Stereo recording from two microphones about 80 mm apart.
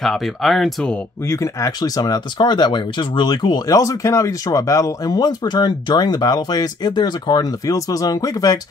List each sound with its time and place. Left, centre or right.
0.0 s speech: centre
1.2 s speech: left
1.8 s speech: left
3.7 s speech: left